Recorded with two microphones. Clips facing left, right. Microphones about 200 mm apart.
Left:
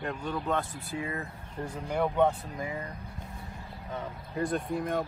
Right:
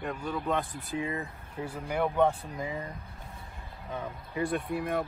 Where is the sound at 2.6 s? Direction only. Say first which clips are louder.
Even; 20° right (ahead or behind).